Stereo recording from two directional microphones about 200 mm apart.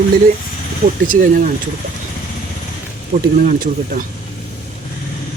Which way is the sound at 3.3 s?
45° right (ahead or behind).